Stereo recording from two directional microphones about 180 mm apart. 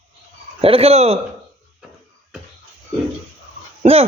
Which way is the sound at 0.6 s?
35° right (ahead or behind).